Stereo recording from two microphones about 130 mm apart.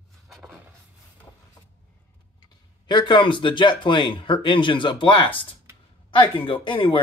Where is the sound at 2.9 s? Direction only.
35° left (ahead or behind).